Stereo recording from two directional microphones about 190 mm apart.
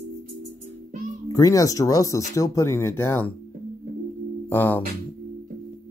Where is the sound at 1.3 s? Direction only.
15° left (ahead or behind).